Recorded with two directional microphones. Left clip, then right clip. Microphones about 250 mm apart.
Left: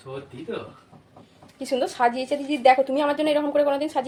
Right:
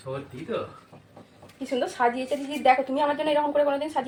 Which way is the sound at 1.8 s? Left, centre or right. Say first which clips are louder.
Left 2 dB; left.